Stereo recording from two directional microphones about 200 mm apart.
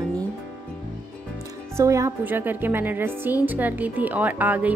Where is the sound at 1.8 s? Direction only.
15° right (ahead or behind).